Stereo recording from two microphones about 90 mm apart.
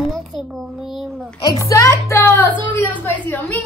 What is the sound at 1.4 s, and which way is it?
A child's voice, 40° left (ahead or behind).